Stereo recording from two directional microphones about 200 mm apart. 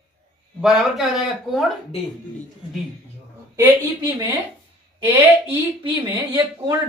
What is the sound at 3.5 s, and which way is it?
Speech, 10° right (ahead or behind).